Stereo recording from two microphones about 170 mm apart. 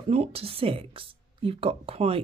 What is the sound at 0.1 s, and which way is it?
Speech, 35° right (ahead or behind).